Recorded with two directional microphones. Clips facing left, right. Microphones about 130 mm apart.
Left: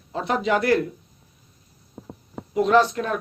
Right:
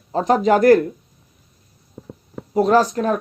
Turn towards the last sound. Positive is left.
turn(degrees=-40)  # may be behind; listen again after turning